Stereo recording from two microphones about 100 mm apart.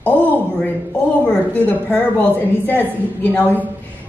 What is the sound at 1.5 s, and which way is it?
A woman's voice, 15° left (ahead or behind).